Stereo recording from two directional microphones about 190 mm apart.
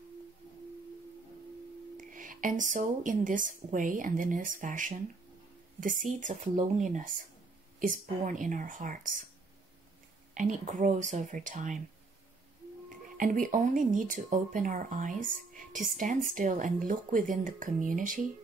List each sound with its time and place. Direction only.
2.0 s speech: 45° right (ahead or behind)
10.3 s speech: 40° right (ahead or behind)
13.2 s speech: 45° right (ahead or behind)